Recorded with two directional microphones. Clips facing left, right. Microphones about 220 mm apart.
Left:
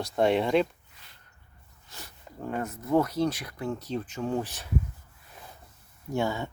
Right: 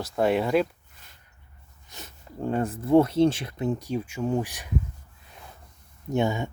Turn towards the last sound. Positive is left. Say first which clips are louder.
# right 4 dB
turn(degrees=-20)  # may be behind; listen again after turning